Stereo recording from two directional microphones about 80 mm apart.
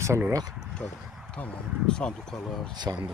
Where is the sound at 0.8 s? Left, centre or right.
Left.